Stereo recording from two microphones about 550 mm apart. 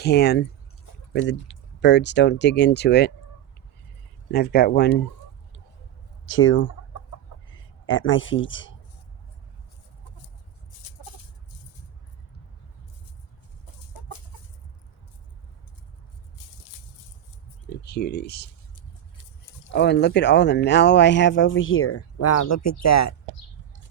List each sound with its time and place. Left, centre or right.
0.0 s speech: centre
4.3 s speech: centre
6.2 s a man's voice: left
10.8 s chicken: left
14.0 s chicken: left
17.8 s speech: centre
19.7 s speech: centre
22.8 s a sound: left